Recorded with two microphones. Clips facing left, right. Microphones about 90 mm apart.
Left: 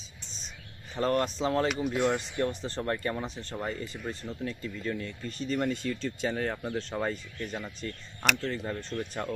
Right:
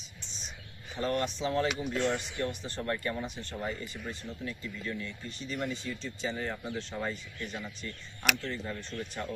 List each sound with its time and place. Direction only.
0.2 s whispering: centre (ahead or behind)
0.9 s speech: 40° left (ahead or behind)
5.8 s speech: 65° left (ahead or behind); by 9.2 s 40° left (ahead or behind)